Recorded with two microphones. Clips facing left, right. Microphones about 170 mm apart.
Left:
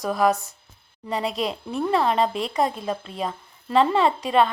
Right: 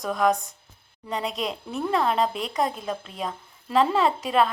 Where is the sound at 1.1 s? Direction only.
Centre (ahead or behind).